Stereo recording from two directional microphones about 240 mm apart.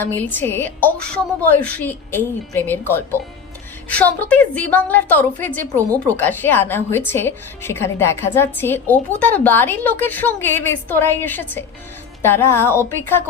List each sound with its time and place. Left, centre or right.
0.0 s a woman's voice: centre